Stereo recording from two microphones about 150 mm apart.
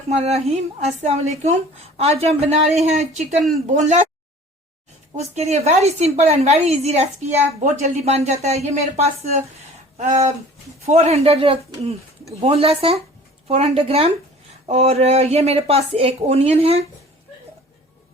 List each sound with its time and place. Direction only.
0.1 s speech: 45° right (ahead or behind)
5.1 s speech: 50° right (ahead or behind)